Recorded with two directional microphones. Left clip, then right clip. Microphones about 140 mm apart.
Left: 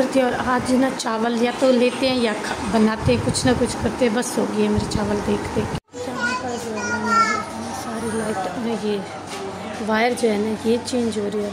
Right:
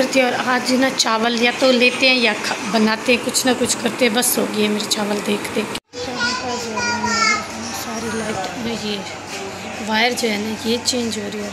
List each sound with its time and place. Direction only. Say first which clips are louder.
0.0 s speech: right 3 dB; 15° left (ahead or behind)
9.8 s speech: right 1 dB; 15° left (ahead or behind)